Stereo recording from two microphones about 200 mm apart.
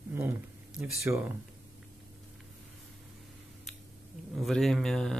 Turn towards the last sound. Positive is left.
turn(degrees=0)  # may be behind; listen again after turning